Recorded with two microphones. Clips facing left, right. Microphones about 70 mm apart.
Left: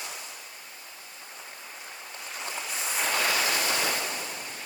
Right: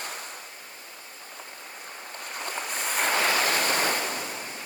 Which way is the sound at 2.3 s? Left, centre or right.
Right.